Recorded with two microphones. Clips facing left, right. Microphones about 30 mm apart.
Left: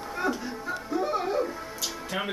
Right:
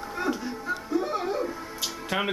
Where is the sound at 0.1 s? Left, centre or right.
Centre.